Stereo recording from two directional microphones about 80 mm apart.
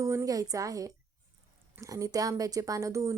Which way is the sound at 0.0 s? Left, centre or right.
Right.